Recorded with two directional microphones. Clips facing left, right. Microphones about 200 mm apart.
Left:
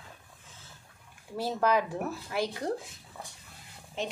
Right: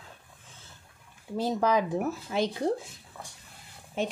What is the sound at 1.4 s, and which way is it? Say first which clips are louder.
Speech: right 2 dB; 15° right (ahead or behind).